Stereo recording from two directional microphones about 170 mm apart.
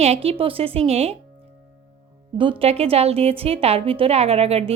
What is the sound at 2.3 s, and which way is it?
A woman's voice, 30° right (ahead or behind).